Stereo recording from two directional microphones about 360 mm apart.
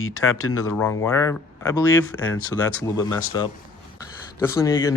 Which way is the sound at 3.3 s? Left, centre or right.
Centre.